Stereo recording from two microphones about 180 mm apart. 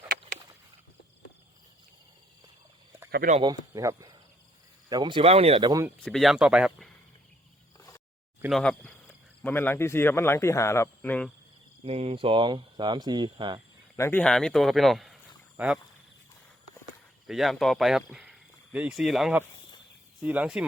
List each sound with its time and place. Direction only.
3.4 s speech: 20° right (ahead or behind)
6.0 s speech: centre (ahead or behind)
7.8 s a sound: 20° left (ahead or behind)
8.4 s speech: centre (ahead or behind)
11.8 s speech: 35° right (ahead or behind)
13.9 s speech: 15° left (ahead or behind); by 15.8 s 5° right (ahead or behind)
17.2 s speech: centre (ahead or behind)